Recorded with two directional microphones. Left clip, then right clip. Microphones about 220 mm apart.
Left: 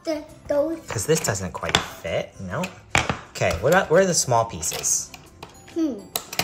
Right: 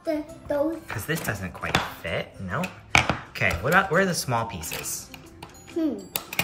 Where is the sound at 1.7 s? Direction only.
10° left (ahead or behind).